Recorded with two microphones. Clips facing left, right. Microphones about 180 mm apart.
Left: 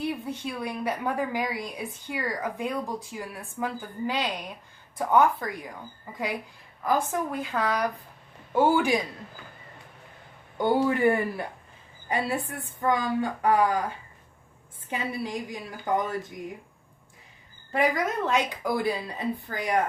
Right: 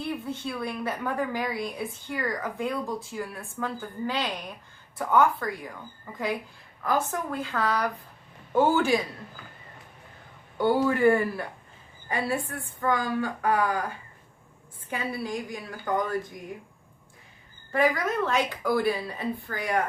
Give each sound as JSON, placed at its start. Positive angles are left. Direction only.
{"t": 0.3, "sound": "a woman's voice", "side_deg": 15}
{"t": 6.8, "sound": "a woman's voice", "side_deg": 15}
{"t": 10.6, "sound": "a woman's voice", "side_deg": 20}
{"t": 14.8, "sound": "a woman's voice", "side_deg": 20}
{"t": 17.7, "sound": "a woman's voice", "side_deg": 20}